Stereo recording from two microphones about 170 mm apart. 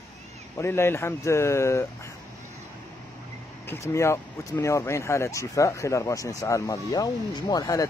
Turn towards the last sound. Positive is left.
turn(degrees=20)  # may be behind; listen again after turning